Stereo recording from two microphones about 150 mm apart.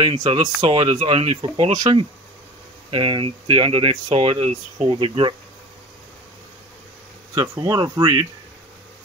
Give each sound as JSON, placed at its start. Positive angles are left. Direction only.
{"t": 0.0, "sound": "speech", "side_deg": -35}
{"t": 7.3, "sound": "speech", "side_deg": -30}